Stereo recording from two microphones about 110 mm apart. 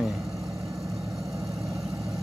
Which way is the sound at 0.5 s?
30° right (ahead or behind).